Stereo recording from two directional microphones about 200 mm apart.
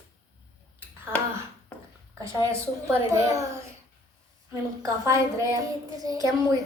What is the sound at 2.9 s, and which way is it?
A woman's voice, 15° right (ahead or behind).